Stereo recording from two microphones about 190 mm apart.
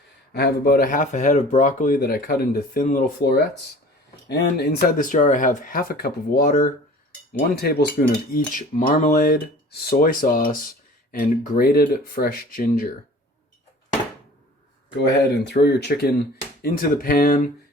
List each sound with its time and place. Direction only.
0.3 s cutlery: 55° left (ahead or behind)
14.9 s speech: 60° left (ahead or behind)
16.6 s cutlery: 45° left (ahead or behind)